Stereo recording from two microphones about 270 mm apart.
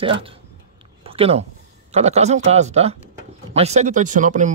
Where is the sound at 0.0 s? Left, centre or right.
Centre.